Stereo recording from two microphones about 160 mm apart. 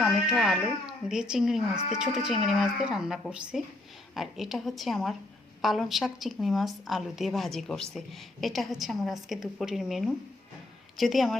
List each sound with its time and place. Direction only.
0.0 s a woman's voice: centre (ahead or behind)